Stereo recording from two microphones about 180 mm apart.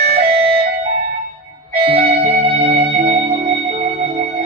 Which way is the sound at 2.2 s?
30° right (ahead or behind).